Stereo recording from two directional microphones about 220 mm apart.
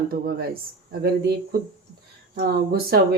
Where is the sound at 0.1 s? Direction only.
45° right (ahead or behind).